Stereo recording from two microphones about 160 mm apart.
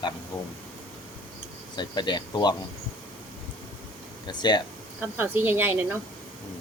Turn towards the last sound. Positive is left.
turn(degrees=-15)  # may be behind; listen again after turning